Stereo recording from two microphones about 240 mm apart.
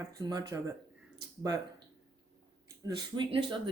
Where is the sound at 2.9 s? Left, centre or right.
Centre.